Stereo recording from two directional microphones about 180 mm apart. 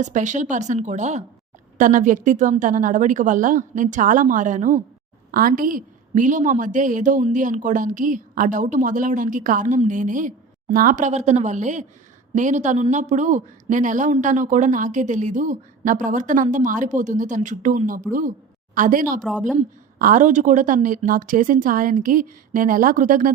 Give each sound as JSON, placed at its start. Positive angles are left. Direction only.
{"t": 0.0, "sound": "a man's voice", "side_deg": -45}
{"t": 19.2, "sound": "a woman's voice", "side_deg": 0}
{"t": 20.0, "sound": "a man's voice", "side_deg": -45}